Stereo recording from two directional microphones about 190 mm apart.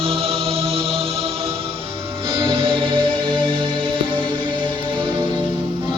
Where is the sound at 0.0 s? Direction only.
30° right (ahead or behind).